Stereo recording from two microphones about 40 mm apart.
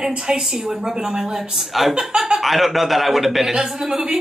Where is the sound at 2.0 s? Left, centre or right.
Centre.